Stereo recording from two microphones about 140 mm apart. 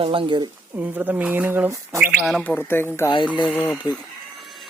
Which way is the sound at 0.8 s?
10° right (ahead or behind).